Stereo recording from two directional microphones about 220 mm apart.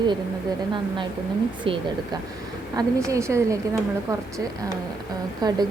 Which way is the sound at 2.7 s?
15° right (ahead or behind).